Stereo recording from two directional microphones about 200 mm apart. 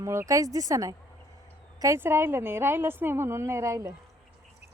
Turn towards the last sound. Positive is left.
turn(degrees=-15)  # may be behind; listen again after turning